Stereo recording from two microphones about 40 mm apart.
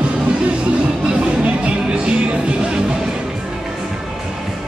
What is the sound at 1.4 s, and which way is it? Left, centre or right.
Music, right.